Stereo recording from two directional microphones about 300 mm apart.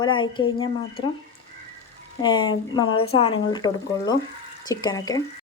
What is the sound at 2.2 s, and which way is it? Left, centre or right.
Speech, centre.